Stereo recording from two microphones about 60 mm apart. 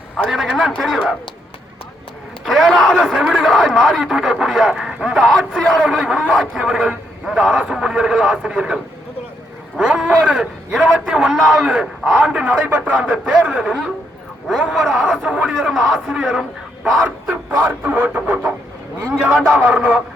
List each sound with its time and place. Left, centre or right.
0.3 s speech: centre
2.4 s a man's voice: centre
10.8 s speech: centre
11.1 s a man's voice: centre
14.7 s speech: centre
15.0 s a man's voice: centre
15.7 s speech: centre
17.8 s speech: right
19.7 s speech: right